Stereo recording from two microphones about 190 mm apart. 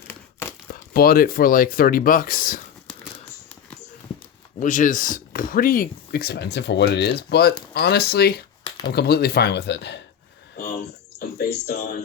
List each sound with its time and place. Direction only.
0.1 s crumpling: 15° left (ahead or behind)
0.7 s speech: 50° left (ahead or behind)
4.6 s speech: 40° left (ahead or behind); by 10.0 s 65° left (ahead or behind)
11.3 s speech: 55° left (ahead or behind)